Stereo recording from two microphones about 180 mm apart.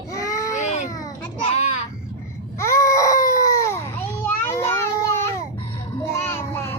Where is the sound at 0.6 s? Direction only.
40° left (ahead or behind).